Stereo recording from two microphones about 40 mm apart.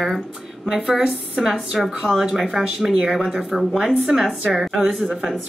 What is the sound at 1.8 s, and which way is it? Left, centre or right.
A woman's voice, centre.